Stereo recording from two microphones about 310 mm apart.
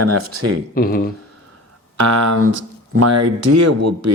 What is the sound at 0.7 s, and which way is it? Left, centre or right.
Speech, left.